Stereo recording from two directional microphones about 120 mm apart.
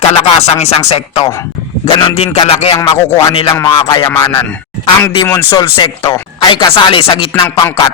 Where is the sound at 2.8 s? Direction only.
25° left (ahead or behind).